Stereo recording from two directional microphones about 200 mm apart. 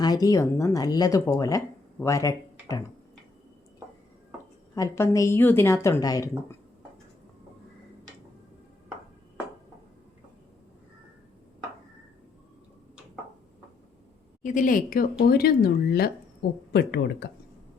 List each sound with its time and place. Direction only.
0.0 s speech: 20° left (ahead or behind)
4.7 s a woman's voice: 15° left (ahead or behind)
14.4 s speech: 40° left (ahead or behind)